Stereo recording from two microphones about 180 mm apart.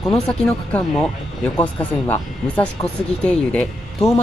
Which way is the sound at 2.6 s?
5° left (ahead or behind).